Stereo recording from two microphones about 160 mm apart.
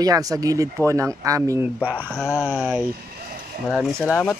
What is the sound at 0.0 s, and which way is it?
Speech, 20° right (ahead or behind).